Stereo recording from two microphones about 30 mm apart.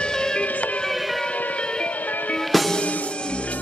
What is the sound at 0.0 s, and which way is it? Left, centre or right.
Music, left.